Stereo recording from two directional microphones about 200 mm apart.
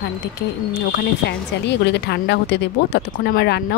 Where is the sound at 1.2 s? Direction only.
55° left (ahead or behind).